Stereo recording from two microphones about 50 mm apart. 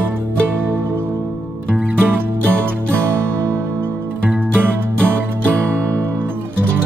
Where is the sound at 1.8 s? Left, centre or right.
Right.